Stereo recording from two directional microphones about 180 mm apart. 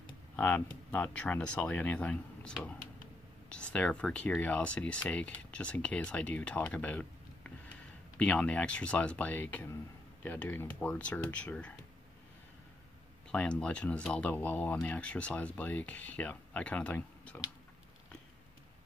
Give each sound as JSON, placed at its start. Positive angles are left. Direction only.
{"t": 0.4, "sound": "speech", "side_deg": 5}
{"t": 13.3, "sound": "speech", "side_deg": 5}